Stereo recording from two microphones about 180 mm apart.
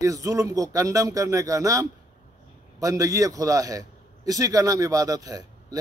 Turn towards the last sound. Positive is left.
turn(degrees=-20)  # may be behind; listen again after turning